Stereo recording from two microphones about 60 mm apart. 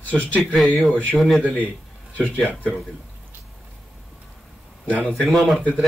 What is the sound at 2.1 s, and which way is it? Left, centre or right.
Speech, left.